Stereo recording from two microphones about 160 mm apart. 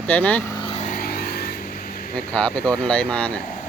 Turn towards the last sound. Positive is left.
turn(degrees=5)  # may be behind; listen again after turning